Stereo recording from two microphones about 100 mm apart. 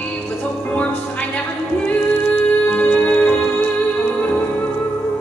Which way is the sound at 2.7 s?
15° left (ahead or behind).